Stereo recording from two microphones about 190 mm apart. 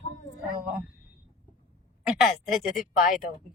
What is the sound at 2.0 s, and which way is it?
Speech, 5° right (ahead or behind).